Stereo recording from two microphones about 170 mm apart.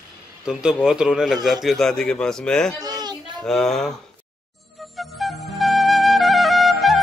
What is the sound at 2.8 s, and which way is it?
Children playing, 20° right (ahead or behind).